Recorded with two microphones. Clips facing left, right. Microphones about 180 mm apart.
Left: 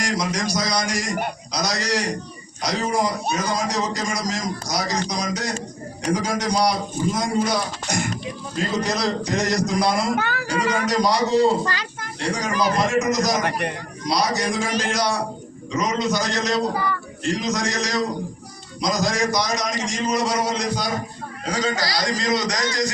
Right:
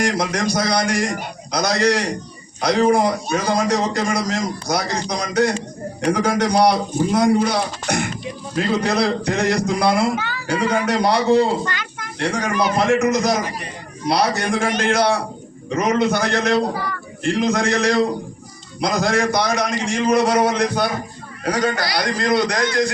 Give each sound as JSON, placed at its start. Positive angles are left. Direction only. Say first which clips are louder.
{"t": 0.0, "sound": "a man's voice", "louder": "right 4 dB", "side_deg": -55}
{"t": 11.6, "sound": "a child's voice", "louder": "even", "side_deg": 35}
{"t": 12.2, "sound": "a man's voice", "louder": "right 2 dB", "side_deg": -60}
{"t": 13.4, "sound": "a man's voice", "louder": "left 4 dB", "side_deg": 65}
{"t": 14.0, "sound": "a man's voice", "louder": "right 3 dB", "side_deg": -60}